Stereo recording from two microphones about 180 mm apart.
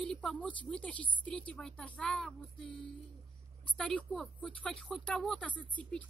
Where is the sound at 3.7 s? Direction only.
5° left (ahead or behind).